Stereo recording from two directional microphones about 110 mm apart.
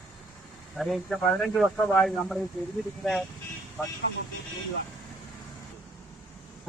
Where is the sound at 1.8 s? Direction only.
15° left (ahead or behind).